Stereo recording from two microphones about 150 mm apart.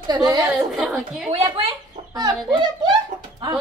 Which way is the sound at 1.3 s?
40° right (ahead or behind).